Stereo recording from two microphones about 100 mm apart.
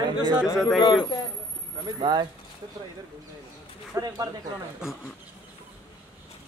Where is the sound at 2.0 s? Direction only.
45° right (ahead or behind).